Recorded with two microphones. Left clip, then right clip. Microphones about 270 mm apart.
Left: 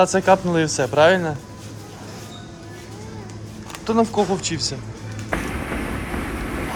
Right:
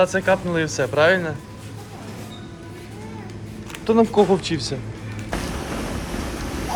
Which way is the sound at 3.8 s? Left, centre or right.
Centre.